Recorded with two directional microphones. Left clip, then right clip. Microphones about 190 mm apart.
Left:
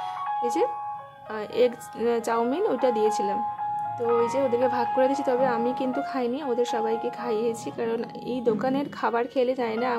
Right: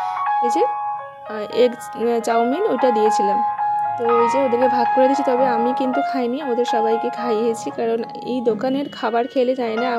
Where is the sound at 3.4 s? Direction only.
35° right (ahead or behind).